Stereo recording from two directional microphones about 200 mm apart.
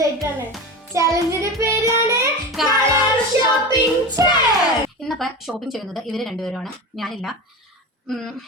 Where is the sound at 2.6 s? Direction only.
Centre (ahead or behind).